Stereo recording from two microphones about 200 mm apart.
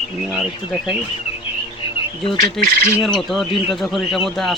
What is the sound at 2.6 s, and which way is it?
Speech, centre (ahead or behind).